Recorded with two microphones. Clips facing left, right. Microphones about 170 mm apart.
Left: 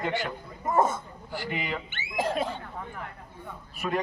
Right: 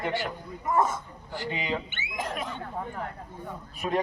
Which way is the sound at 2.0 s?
30° left (ahead or behind).